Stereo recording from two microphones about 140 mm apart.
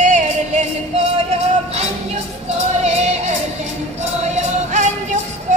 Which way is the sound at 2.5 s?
50° right (ahead or behind).